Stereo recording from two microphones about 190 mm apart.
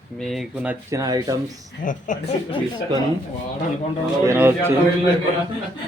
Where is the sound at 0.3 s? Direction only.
5° right (ahead or behind); by 1.4 s 20° right (ahead or behind).